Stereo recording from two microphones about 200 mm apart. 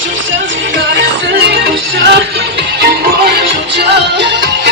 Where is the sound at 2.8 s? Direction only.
50° right (ahead or behind).